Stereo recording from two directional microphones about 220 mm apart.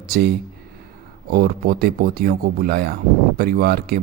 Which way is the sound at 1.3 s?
45° right (ahead or behind).